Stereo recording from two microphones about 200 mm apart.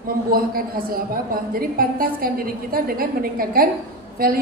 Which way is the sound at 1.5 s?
45° right (ahead or behind).